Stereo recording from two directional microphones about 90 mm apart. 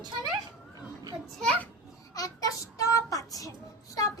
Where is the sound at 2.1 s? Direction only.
40° left (ahead or behind).